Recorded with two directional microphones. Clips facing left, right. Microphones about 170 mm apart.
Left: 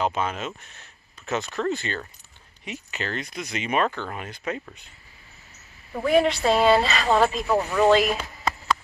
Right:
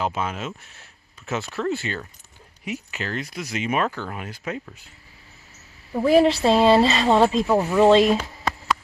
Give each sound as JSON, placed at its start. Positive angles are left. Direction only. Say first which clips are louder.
{"t": 0.0, "sound": "speech", "louder": "left 1 dB", "side_deg": -5}
{"t": 6.0, "sound": "a woman's voice", "louder": "right 3 dB", "side_deg": -30}
{"t": 7.4, "sound": "speech", "louder": "right 3 dB", "side_deg": -15}
{"t": 7.8, "sound": "a woman's voice", "louder": "right 4 dB", "side_deg": -30}